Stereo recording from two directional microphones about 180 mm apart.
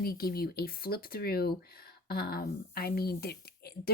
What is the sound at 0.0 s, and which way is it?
Speech, 55° left (ahead or behind).